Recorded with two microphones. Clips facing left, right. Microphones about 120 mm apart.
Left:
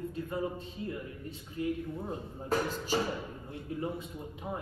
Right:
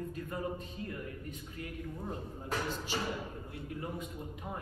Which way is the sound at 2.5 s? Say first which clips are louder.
Left 6 dB; 40° left (ahead or behind).